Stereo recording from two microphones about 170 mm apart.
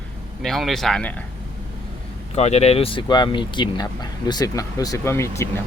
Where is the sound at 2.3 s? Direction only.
40° left (ahead or behind).